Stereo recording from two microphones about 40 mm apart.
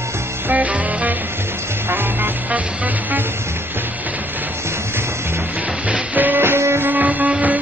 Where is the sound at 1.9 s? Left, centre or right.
Right.